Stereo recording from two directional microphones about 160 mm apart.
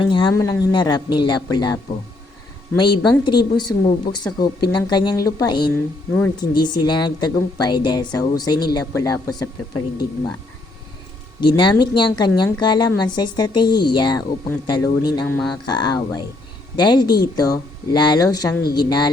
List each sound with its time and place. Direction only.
0.0 s a woman's voice: 30° left (ahead or behind)
5.7 s speech: 10° left (ahead or behind)
6.6 s a woman's voice: 25° left (ahead or behind)
11.3 s a woman's voice: 30° left (ahead or behind)